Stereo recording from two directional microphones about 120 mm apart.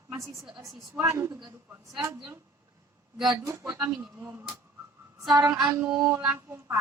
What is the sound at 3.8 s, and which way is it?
Speech, 10° right (ahead or behind).